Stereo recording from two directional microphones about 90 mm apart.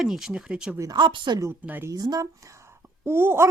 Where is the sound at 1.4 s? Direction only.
25° right (ahead or behind).